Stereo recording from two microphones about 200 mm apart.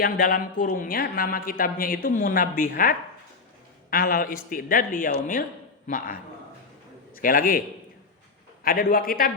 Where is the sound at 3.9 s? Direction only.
50° left (ahead or behind).